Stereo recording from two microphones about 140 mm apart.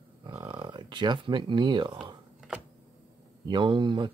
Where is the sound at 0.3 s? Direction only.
30° right (ahead or behind).